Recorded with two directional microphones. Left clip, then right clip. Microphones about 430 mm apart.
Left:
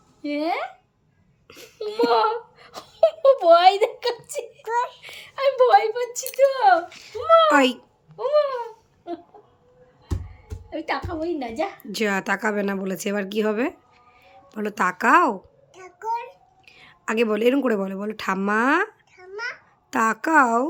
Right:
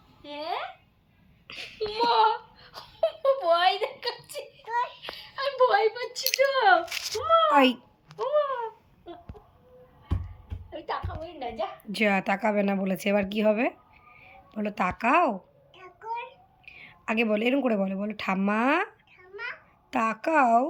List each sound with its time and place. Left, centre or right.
0.2 s speech: left
1.5 s a sound: centre
1.9 s giggle: left
4.6 s child singing: centre
5.1 s a sound: left
7.5 s a woman's voice: centre
8.4 s a sound: left
10.7 s a woman's voice: left
11.9 s a woman's voice: centre
15.8 s child singing: centre
16.6 s a woman's voice: centre